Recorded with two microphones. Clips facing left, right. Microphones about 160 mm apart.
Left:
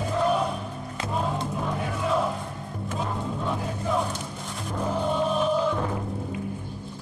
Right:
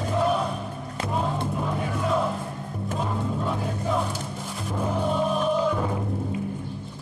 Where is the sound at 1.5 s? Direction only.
Centre (ahead or behind).